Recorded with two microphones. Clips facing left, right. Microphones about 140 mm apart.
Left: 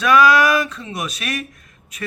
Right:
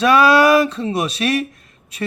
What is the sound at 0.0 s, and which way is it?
Speech, 30° right (ahead or behind).